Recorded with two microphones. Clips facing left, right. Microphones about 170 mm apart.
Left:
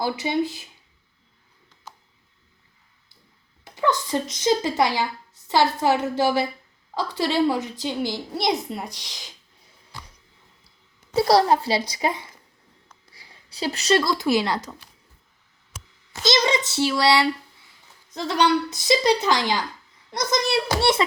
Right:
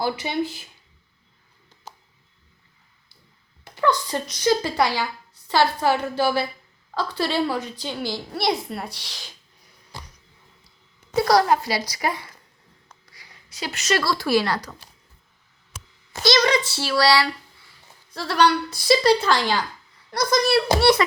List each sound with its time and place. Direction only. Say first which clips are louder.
0.2 s a woman's voice: left 2 dB; 20° left (ahead or behind)
3.6 s a woman's voice: right 1 dB; 20° left (ahead or behind)
11.1 s a woman's voice: left 1 dB; 30° left (ahead or behind)
13.1 s a sound: even; 25° left (ahead or behind)
14.0 s a woman's voice: even; 20° left (ahead or behind)
16.5 s a woman's voice: left 1 dB; 20° left (ahead or behind)